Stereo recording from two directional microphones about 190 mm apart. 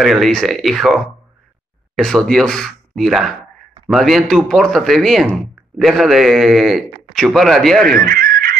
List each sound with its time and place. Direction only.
0.0 s speech: centre (ahead or behind)
8.0 s fowl: 50° right (ahead or behind)